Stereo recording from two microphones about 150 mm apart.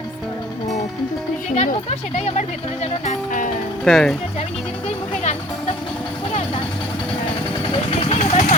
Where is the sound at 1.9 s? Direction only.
45° left (ahead or behind).